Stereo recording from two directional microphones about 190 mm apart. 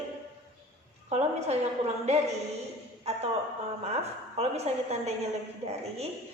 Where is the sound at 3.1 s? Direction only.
35° right (ahead or behind).